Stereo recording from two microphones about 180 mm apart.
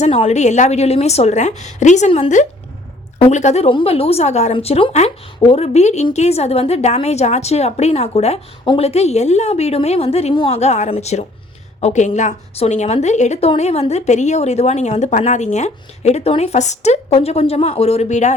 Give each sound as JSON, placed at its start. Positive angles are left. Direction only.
{"t": 0.0, "sound": "a woman's voice", "side_deg": 35}